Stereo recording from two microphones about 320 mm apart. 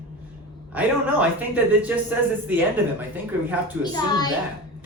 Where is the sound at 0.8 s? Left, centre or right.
Centre.